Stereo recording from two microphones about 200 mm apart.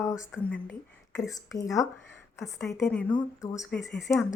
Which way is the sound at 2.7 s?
5° left (ahead or behind).